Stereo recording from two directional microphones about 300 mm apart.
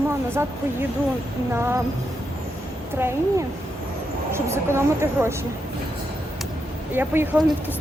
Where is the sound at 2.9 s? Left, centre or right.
Centre.